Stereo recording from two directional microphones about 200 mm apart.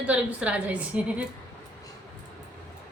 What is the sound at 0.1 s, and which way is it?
Speech, 5° right (ahead or behind).